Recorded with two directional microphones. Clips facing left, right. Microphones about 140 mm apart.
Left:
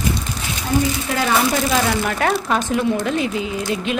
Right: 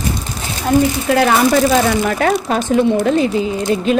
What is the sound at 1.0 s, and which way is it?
Speech, 60° right (ahead or behind).